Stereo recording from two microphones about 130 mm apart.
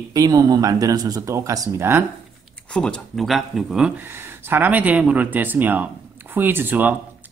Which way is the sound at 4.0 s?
15° right (ahead or behind).